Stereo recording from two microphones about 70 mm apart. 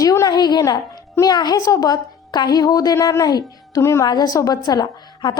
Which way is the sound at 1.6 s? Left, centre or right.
Left.